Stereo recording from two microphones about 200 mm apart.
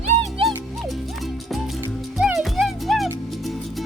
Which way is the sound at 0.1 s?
30° right (ahead or behind).